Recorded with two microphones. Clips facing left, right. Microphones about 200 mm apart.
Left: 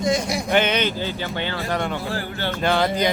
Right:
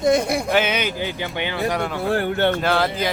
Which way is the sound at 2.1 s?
60° right (ahead or behind).